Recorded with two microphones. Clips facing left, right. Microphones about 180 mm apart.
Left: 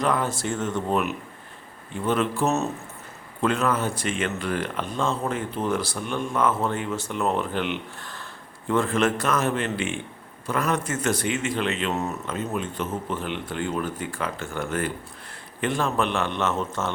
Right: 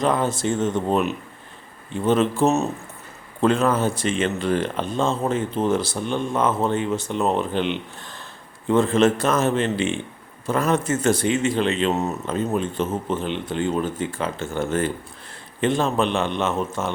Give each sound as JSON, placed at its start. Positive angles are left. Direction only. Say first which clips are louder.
{"t": 0.0, "sound": "speech", "louder": "right 3 dB", "side_deg": -25}